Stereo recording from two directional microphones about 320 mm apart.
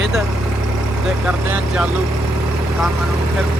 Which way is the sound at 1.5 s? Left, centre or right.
Centre.